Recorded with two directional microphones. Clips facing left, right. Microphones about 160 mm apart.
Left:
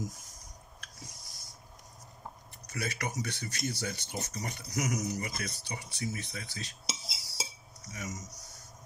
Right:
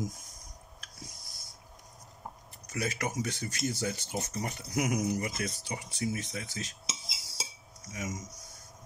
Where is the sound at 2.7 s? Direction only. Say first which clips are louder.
Right 3 dB; 45° right (ahead or behind).